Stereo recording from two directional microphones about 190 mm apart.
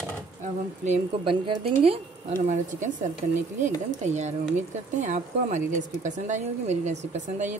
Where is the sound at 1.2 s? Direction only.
30° right (ahead or behind).